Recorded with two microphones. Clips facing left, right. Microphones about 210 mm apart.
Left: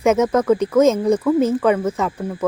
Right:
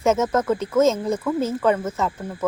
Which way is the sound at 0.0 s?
15° left (ahead or behind).